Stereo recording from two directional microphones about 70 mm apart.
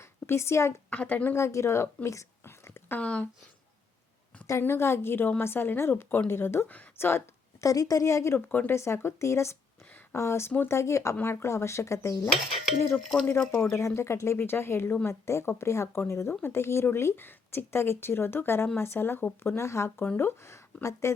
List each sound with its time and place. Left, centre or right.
0.0 s a sound: left
0.9 s speech: left
1.4 s speech: left
2.0 s whispering: left
3.0 s speech: centre
4.6 s speech: left
7.6 s a woman's voice: left
8.4 s speech: left
8.7 s a woman's voice: left
13.0 s speech: centre
13.5 s speech: left